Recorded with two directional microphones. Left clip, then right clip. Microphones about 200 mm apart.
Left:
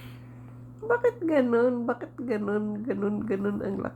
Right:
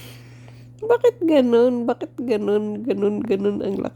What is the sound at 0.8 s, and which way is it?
A woman's voice, 50° right (ahead or behind).